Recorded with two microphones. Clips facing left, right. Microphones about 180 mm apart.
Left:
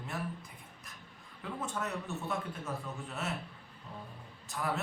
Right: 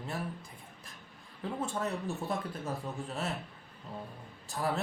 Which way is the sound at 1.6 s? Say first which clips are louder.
Right 3 dB; 30° right (ahead or behind).